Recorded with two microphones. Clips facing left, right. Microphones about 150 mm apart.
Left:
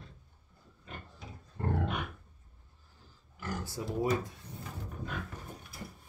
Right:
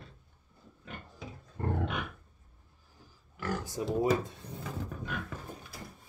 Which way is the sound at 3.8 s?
20° right (ahead or behind).